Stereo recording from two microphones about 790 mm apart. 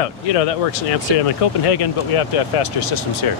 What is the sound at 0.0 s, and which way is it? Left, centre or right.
Speech, left.